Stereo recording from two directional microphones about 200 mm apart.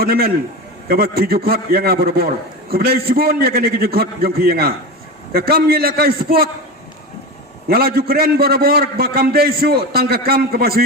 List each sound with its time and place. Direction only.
0.0 s a man's voice: 50° right (ahead or behind)
7.7 s a man's voice: 50° right (ahead or behind)